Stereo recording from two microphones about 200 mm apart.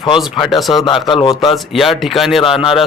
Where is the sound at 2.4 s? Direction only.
25° left (ahead or behind).